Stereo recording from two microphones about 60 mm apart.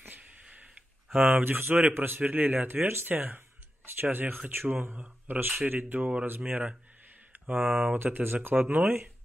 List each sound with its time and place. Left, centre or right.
1.1 s speech: centre
1.7 s speech: right